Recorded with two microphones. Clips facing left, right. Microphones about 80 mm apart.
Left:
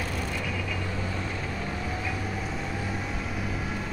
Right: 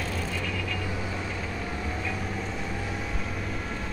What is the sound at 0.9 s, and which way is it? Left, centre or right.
Vehicle, centre.